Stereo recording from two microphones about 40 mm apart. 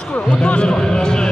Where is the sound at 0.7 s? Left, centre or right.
Centre.